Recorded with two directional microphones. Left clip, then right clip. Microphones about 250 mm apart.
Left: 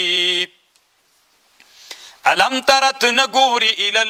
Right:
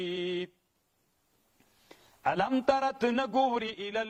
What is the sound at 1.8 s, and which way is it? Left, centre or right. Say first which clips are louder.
A man's voice: left 14 dB; centre.